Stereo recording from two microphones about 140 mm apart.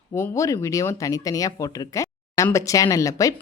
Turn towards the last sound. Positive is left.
turn(degrees=25)  # may be behind; listen again after turning